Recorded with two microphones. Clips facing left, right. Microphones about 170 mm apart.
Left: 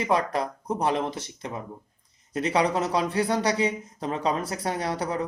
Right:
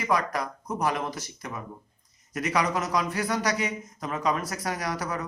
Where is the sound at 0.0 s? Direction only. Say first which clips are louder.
Left 2 dB; 30° left (ahead or behind).